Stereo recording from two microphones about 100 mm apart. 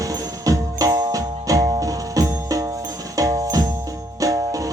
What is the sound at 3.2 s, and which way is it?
Jingle bell, 35° right (ahead or behind).